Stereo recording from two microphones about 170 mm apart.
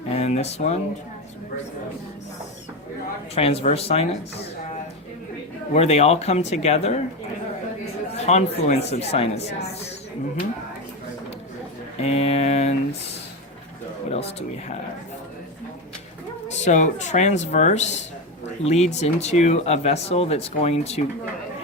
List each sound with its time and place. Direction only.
0.2 s speech: 40° left (ahead or behind)
3.3 s speech: 35° left (ahead or behind)
5.7 s speech: 40° left (ahead or behind)
8.1 s speech: 40° left (ahead or behind)
11.9 s speech: 40° left (ahead or behind)
14.1 s speech: 35° left (ahead or behind)
16.6 s speech: 45° left (ahead or behind)